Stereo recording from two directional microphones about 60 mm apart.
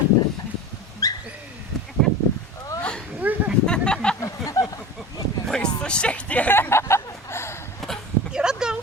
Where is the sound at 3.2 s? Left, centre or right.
Right.